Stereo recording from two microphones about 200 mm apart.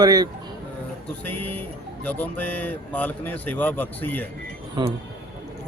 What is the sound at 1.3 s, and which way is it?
Music, 10° left (ahead or behind).